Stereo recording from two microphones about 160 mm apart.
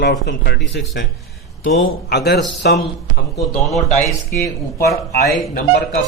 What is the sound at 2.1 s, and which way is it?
Speech, 90° left.